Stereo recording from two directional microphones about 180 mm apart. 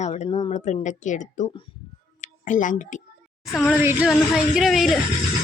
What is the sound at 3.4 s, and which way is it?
Speech, centre (ahead or behind).